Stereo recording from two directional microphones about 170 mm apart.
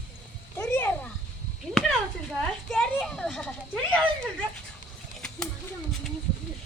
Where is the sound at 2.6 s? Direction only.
5° left (ahead or behind).